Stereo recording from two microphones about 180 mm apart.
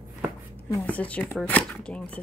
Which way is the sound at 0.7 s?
10° left (ahead or behind).